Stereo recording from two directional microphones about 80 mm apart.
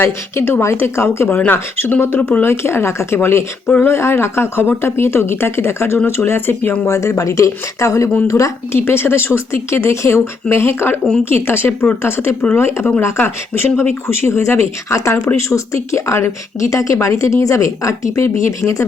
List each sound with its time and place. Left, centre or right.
0.0 s speech: left
8.8 s speech: left